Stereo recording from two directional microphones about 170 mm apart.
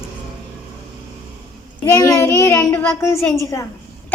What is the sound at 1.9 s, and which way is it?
A child's voice, 20° left (ahead or behind).